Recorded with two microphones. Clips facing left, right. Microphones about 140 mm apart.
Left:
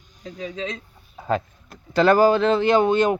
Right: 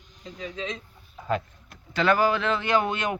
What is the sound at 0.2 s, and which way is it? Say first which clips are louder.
Speech: left 4 dB; 35° left (ahead or behind).